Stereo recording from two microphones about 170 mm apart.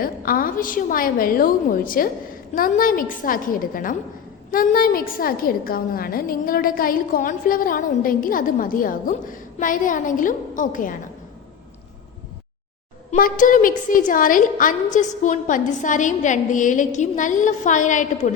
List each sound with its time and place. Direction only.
0.0 s a woman's voice: 55° left (ahead or behind)
13.1 s a woman's voice: 55° left (ahead or behind)